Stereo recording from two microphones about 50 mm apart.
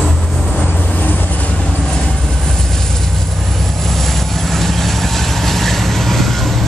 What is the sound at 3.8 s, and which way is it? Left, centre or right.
Vehicle, centre.